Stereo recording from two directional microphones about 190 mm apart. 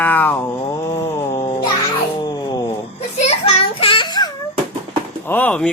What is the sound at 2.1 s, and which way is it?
Wail, 20° left (ahead or behind).